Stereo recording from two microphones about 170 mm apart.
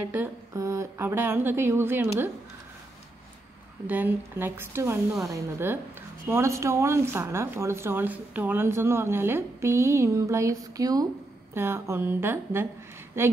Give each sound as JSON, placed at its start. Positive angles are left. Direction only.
{"t": 0.1, "sound": "speech", "side_deg": -15}
{"t": 3.8, "sound": "speech", "side_deg": -10}